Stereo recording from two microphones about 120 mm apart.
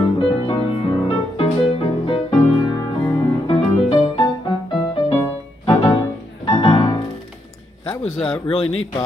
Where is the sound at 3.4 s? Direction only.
45° left (ahead or behind).